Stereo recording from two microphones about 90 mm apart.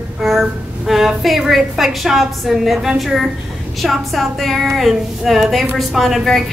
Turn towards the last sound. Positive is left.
turn(degrees=0)  # may be behind; listen again after turning